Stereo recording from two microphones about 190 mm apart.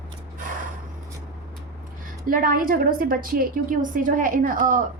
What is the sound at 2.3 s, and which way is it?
A woman's voice, 50° right (ahead or behind).